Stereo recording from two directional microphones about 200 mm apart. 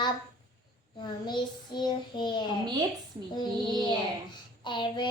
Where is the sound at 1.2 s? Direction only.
20° left (ahead or behind).